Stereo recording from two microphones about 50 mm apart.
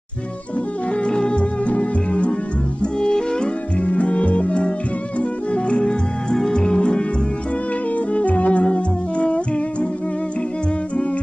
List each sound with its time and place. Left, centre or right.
1.0 s music: centre
3.8 s music: left
8.1 s music: left